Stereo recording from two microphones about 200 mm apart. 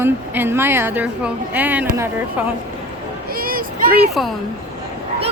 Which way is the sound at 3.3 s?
45° right (ahead or behind).